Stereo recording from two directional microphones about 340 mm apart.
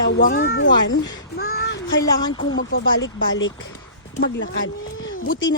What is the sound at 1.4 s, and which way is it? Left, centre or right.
Child singing, left.